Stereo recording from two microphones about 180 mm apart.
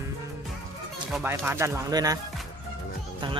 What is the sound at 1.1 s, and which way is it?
Speech, 10° right (ahead or behind).